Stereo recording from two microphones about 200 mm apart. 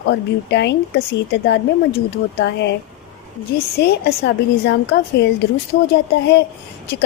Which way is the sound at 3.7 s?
55° left (ahead or behind).